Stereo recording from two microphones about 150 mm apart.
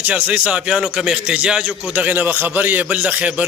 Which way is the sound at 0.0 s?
10° right (ahead or behind).